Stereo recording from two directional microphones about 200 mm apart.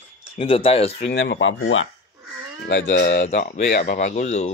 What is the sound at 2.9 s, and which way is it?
Speech, 55° left (ahead or behind).